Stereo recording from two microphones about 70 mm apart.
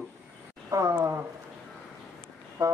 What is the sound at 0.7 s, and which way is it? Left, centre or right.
Speech, right.